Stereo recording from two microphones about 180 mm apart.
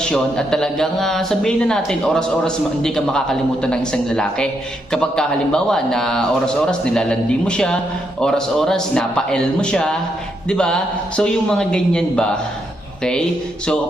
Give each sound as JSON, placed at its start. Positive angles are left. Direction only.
{"t": 0.0, "sound": "speech", "side_deg": 5}